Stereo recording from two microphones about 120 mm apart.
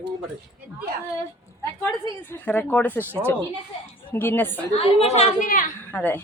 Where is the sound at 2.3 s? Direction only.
15° left (ahead or behind).